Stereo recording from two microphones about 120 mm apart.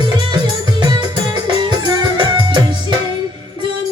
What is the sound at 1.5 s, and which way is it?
Music, 40° right (ahead or behind).